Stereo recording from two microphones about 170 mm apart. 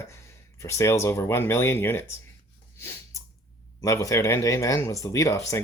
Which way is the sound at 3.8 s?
20° left (ahead or behind).